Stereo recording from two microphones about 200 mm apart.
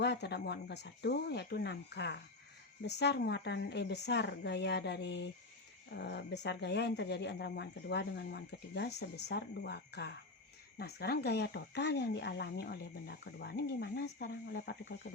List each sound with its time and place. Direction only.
0.0 s speech: 60° left (ahead or behind)